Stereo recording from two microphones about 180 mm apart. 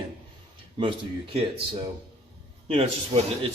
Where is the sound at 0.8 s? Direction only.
30° right (ahead or behind).